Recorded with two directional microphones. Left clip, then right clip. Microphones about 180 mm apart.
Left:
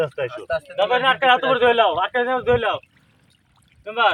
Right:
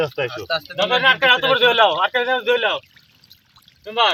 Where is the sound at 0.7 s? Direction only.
60° left (ahead or behind).